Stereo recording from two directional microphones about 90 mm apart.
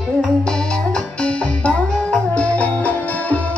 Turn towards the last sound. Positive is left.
turn(degrees=15)  # may be behind; listen again after turning